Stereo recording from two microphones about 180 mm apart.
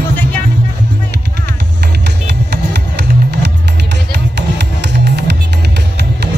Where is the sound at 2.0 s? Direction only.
70° right (ahead or behind).